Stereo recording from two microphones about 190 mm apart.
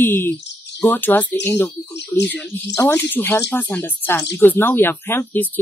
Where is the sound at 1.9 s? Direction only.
65° left (ahead or behind).